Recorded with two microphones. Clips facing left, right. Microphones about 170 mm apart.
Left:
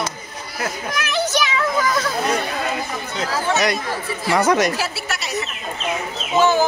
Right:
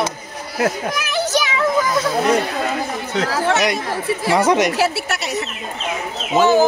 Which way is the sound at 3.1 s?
75° right (ahead or behind).